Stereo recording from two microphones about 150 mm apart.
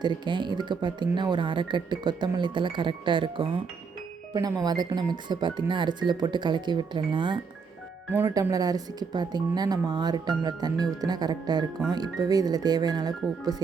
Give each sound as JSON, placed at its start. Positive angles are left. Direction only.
{"t": 0.0, "sound": "a woman's voice", "side_deg": -30}